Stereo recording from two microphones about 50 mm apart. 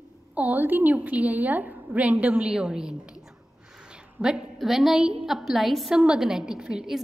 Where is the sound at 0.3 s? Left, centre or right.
Right.